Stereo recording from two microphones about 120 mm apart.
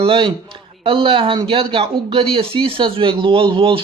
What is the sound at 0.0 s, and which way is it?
Speech, 45° right (ahead or behind).